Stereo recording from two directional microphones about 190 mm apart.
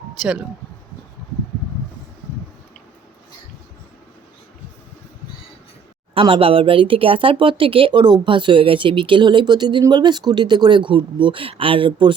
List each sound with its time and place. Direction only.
0.2 s speech: 5° right (ahead or behind)
6.1 s speech: 25° right (ahead or behind)